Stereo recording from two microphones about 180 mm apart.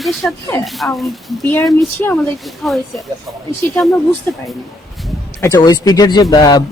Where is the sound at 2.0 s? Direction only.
10° left (ahead or behind).